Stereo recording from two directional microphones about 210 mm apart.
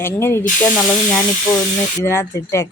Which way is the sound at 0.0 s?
10° left (ahead or behind).